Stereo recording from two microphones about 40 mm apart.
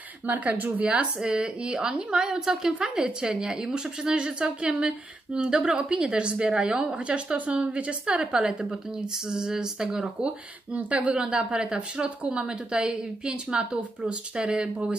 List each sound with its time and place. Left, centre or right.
0.3 s a woman's voice: right
1.2 s a woman's voice: right
2.8 s a woman's voice: right
8.2 s a woman's voice: centre
9.3 s a sound: centre
10.7 s a woman's voice: right